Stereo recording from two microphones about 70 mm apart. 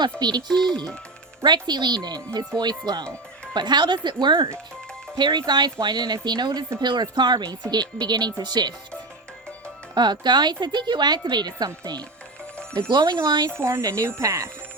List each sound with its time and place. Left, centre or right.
0.2 s a woman's voice: right
1.5 s a woman's voice: right
9.9 s a woman's voice: right
12.7 s speech: right
13.6 s speech: right